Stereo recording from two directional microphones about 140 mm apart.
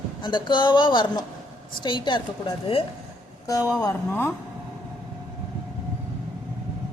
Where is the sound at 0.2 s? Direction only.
35° left (ahead or behind).